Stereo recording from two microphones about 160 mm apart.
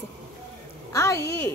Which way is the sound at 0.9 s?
20° left (ahead or behind).